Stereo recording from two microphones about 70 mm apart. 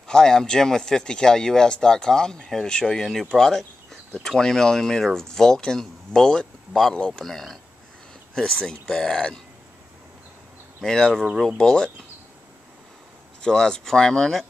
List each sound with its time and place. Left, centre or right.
0.1 s speech: centre
10.8 s speech: centre
13.4 s speech: centre